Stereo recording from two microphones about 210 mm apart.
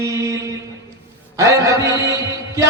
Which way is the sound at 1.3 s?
15° right (ahead or behind).